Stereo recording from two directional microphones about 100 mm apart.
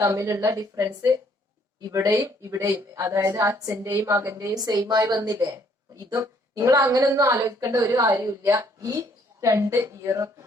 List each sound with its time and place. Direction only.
0.0 s a woman's voice: 30° right (ahead or behind)